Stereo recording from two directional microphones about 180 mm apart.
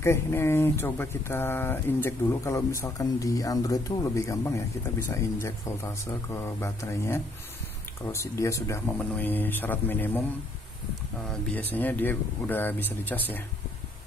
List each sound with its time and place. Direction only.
0.0 s speech: 15° left (ahead or behind)
11.5 s speech: 10° left (ahead or behind)